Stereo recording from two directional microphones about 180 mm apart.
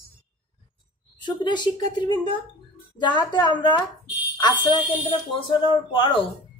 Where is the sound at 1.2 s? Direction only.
25° left (ahead or behind).